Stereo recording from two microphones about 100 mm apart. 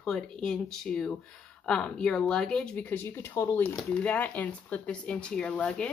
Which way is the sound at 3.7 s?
10° left (ahead or behind).